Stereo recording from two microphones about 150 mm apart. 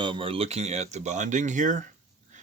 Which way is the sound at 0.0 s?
35° right (ahead or behind).